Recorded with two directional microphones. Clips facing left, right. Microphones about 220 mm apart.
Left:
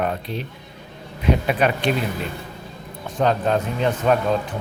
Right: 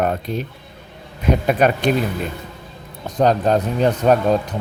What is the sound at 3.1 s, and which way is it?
Speech, 40° right (ahead or behind).